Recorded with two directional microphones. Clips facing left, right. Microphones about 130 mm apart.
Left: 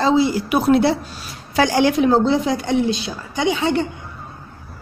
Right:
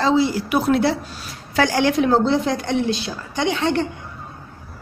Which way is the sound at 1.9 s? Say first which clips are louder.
Left 1 dB; centre (ahead or behind).